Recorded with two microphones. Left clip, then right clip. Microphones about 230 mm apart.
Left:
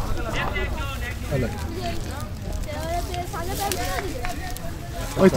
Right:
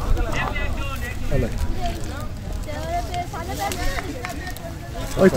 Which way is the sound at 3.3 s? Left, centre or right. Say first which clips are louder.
Even; left.